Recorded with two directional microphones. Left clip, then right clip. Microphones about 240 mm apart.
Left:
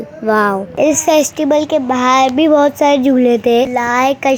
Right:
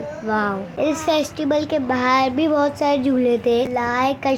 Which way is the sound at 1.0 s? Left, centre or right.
Left.